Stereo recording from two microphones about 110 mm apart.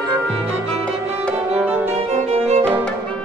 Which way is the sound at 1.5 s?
15° right (ahead or behind).